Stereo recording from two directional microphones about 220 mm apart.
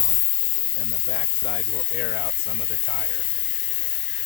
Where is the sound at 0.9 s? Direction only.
35° left (ahead or behind).